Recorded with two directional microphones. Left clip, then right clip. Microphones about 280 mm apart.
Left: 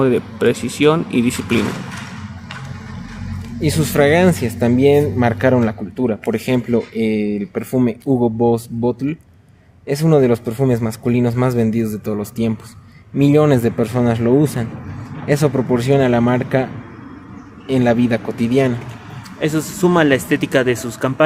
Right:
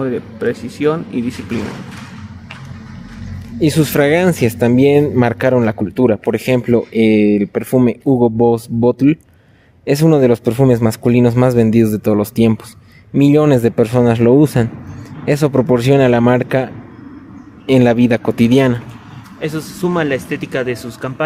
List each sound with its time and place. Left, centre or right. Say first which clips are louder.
0.0 s speech: left 3 dB; left
3.6 s speech: right 2 dB; right
17.7 s speech: right 4 dB; right
19.4 s speech: left 3 dB; centre